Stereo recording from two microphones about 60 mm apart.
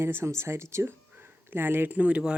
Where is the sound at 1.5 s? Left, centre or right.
Right.